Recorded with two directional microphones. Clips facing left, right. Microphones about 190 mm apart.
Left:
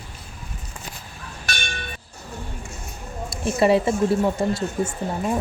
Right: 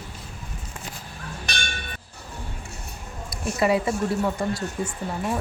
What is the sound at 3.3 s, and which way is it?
Speech, 25° left (ahead or behind).